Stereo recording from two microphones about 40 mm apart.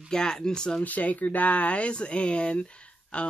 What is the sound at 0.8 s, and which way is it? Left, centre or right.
Speech, left.